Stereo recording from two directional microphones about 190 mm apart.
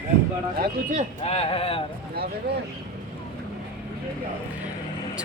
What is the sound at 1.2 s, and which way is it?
Speech, 30° left (ahead or behind).